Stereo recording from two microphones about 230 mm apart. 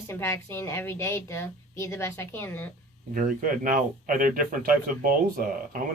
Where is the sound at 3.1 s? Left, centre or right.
Right.